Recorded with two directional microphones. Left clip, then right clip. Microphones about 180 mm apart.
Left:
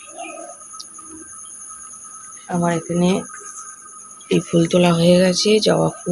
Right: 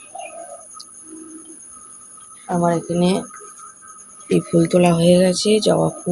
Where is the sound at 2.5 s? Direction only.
5° left (ahead or behind).